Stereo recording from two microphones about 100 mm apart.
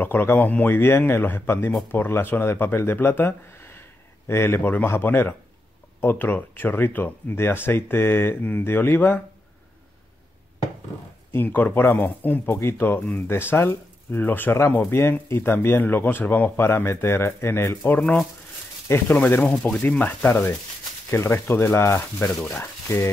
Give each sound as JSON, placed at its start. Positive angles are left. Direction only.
{"t": 0.0, "sound": "speech", "side_deg": 20}
{"t": 11.3, "sound": "speech", "side_deg": 20}